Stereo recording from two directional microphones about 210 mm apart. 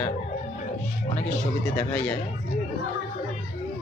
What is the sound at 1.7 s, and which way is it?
Speech, 5° left (ahead or behind).